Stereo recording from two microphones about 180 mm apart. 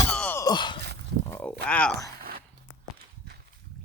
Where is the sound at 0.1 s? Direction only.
10° left (ahead or behind).